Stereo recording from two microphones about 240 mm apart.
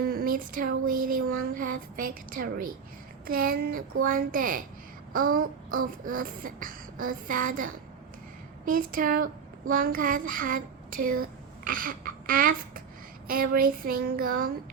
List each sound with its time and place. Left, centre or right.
0.0 s speech: right
3.2 s beatboxing: right
11.0 s speech: right
13.2 s beatboxing: right